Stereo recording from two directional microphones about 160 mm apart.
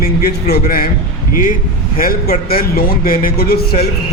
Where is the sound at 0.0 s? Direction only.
65° left (ahead or behind).